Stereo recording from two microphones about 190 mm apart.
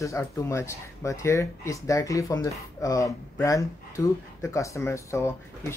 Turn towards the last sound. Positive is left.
turn(degrees=15)  # may be behind; listen again after turning